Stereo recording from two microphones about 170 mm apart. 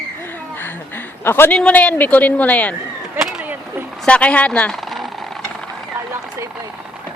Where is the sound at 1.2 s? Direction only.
15° left (ahead or behind).